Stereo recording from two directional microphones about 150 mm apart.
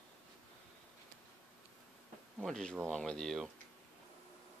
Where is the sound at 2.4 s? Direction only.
5° left (ahead or behind).